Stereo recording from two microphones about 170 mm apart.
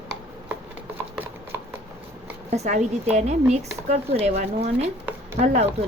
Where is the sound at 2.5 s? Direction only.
40° right (ahead or behind).